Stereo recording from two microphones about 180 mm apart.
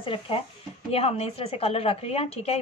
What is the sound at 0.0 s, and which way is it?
A woman's voice, 30° left (ahead or behind).